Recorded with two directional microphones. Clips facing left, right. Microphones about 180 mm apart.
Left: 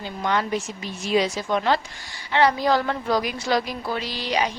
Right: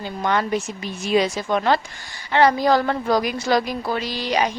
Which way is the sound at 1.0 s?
55° right (ahead or behind).